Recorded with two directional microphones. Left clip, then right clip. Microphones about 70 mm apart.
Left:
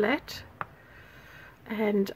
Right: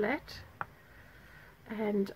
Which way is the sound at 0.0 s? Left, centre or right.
Left.